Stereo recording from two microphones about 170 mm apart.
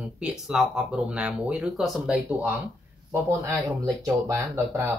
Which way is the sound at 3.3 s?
20° right (ahead or behind).